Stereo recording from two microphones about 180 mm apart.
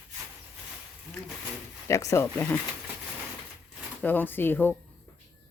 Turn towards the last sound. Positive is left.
turn(degrees=10)  # may be behind; listen again after turning